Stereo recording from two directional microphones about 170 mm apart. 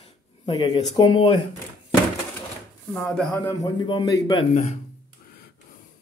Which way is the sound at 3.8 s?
25° left (ahead or behind).